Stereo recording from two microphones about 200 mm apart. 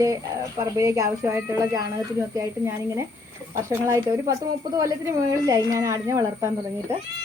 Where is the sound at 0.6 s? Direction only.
15° right (ahead or behind).